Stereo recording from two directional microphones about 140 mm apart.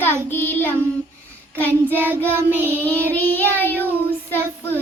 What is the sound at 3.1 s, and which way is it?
Child singing, 10° left (ahead or behind).